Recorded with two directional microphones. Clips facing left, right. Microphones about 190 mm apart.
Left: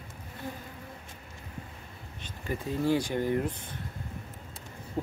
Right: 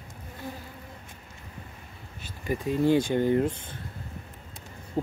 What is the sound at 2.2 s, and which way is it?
Speech, 15° right (ahead or behind).